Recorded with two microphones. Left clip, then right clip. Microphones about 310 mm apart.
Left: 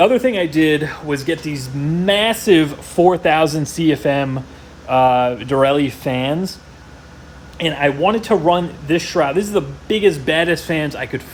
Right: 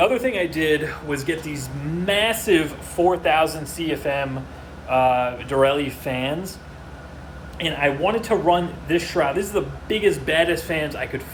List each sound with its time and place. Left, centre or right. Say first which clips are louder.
0.0 s speech: left 6 dB; left
7.6 s speech: left 5 dB; left